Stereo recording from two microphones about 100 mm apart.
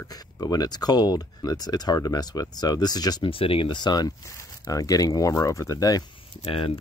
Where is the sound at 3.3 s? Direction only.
65° left (ahead or behind); by 6.1 s 35° left (ahead or behind).